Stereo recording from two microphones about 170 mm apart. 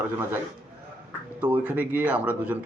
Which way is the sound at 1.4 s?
10° right (ahead or behind).